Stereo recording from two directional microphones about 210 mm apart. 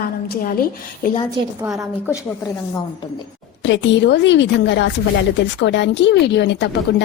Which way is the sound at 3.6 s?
55° left (ahead or behind).